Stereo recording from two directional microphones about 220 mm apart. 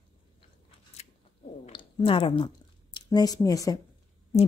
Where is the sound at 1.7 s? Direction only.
20° left (ahead or behind).